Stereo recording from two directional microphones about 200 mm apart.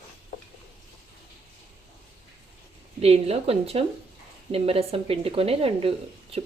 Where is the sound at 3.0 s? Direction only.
30° right (ahead or behind).